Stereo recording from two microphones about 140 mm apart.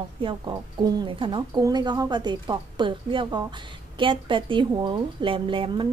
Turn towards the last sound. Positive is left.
turn(degrees=-35)  # may be behind; listen again after turning